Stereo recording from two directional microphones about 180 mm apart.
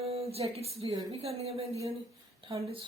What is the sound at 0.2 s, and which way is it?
A woman's voice, 35° right (ahead or behind).